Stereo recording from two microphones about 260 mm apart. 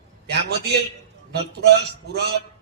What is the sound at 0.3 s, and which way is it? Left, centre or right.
A man's voice, right.